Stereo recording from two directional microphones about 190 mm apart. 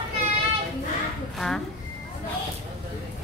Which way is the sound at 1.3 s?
Centre (ahead or behind).